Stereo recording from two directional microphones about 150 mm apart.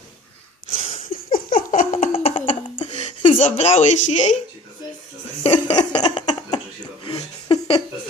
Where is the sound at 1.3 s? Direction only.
65° left (ahead or behind).